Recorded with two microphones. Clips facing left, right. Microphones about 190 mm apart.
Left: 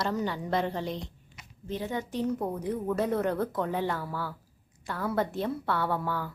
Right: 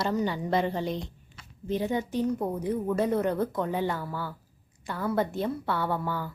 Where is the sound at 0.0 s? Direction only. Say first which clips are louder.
Right 2 dB; centre (ahead or behind).